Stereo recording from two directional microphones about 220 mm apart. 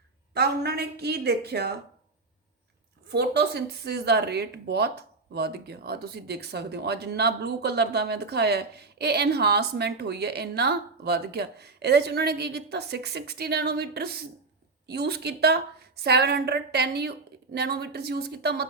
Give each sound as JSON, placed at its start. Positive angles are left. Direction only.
{"t": 0.3, "sound": "speech", "side_deg": -50}
{"t": 3.1, "sound": "speech", "side_deg": -50}